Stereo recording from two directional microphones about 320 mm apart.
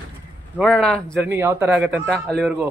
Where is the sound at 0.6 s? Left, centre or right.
Centre.